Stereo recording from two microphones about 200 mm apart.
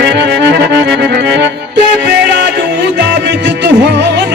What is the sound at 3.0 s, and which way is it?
Music, 60° right (ahead or behind).